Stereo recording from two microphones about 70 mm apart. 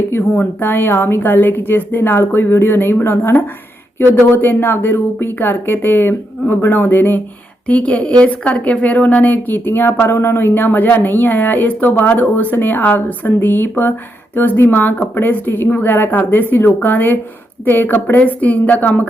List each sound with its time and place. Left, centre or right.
0.1 s a woman's voice: left
7.7 s a woman's voice: centre